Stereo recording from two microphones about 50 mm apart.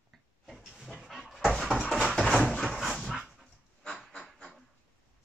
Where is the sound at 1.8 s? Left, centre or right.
Centre.